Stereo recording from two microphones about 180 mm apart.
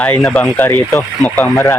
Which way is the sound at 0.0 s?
5° left (ahead or behind).